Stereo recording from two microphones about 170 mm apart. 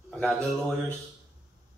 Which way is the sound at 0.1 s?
5° left (ahead or behind).